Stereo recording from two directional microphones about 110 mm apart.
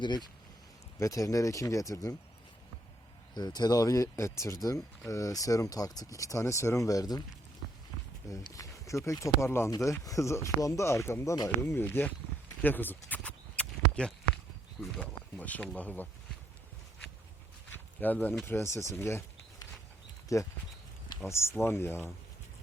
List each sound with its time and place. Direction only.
0.0 s speech: 40° left (ahead or behind)
0.9 s speech: 30° left (ahead or behind)
3.3 s speech: 40° left (ahead or behind)
8.4 s speech: 30° left (ahead or behind)
13.1 s horse: 10° left (ahead or behind)
14.9 s speech: 10° left (ahead or behind)
17.7 s a sound: 15° left (ahead or behind)
18.4 s speech: 25° left (ahead or behind)
20.3 s speech: 30° left (ahead or behind)